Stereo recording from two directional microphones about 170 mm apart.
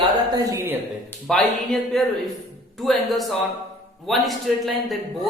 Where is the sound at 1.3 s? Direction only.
Centre (ahead or behind).